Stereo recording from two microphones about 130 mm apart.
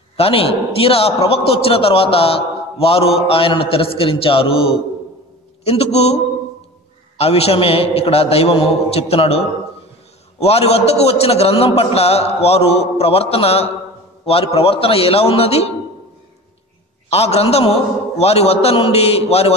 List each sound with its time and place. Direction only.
0.2 s a man's voice: 45° left (ahead or behind)
17.1 s a man's voice: 50° left (ahead or behind)